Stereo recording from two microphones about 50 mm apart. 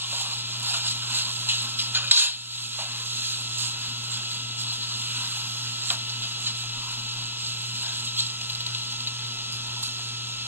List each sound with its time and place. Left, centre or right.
0.7 s music: right